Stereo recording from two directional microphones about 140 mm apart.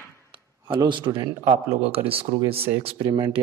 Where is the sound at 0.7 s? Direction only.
35° right (ahead or behind).